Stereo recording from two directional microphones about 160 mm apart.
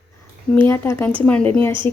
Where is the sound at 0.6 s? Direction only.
15° left (ahead or behind).